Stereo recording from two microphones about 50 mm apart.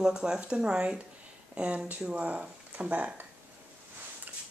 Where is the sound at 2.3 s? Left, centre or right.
Right.